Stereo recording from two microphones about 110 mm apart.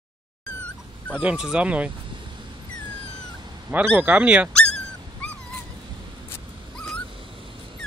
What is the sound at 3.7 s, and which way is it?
Speech, 20° right (ahead or behind).